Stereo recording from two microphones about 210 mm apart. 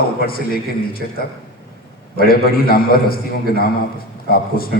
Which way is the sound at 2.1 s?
45° left (ahead or behind).